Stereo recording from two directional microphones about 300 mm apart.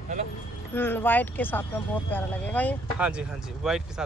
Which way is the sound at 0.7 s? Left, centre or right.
Centre.